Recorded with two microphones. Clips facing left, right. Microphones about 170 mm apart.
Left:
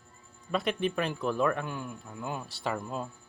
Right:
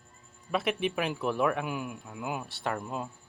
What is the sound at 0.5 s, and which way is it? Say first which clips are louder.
Child singing: even; 5° right (ahead or behind).